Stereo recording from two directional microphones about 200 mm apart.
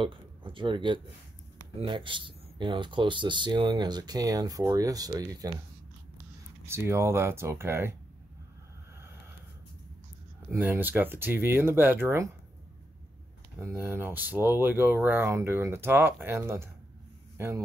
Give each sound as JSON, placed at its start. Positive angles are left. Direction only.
{"t": 0.0, "sound": "speech", "side_deg": -25}
{"t": 6.6, "sound": "speech", "side_deg": -15}
{"t": 10.5, "sound": "speech", "side_deg": -10}
{"t": 13.6, "sound": "speech", "side_deg": -10}